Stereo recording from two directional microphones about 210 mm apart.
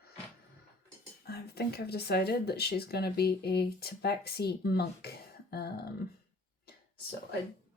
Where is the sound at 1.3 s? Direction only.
50° left (ahead or behind).